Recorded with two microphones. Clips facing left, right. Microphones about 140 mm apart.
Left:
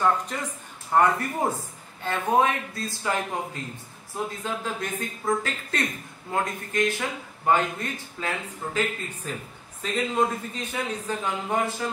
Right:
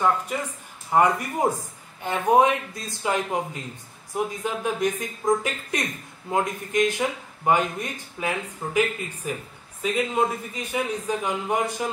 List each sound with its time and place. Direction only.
0.9 s a man's voice: 15° right (ahead or behind)